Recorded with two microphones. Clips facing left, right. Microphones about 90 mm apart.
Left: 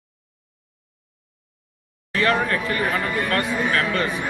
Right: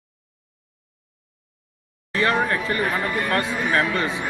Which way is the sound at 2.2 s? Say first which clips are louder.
Even; 25° right (ahead or behind).